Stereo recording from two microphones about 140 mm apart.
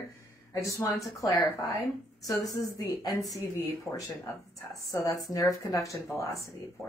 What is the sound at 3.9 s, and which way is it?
Speech, 5° left (ahead or behind).